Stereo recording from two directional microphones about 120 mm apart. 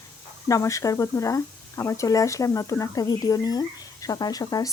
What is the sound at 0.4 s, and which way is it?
Speech, 25° left (ahead or behind).